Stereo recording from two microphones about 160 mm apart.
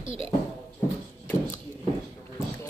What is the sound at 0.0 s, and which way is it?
Speech, 35° right (ahead or behind).